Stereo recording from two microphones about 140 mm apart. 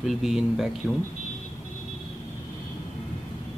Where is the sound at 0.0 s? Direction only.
Centre (ahead or behind).